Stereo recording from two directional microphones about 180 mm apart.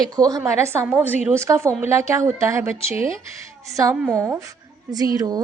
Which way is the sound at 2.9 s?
30° left (ahead or behind).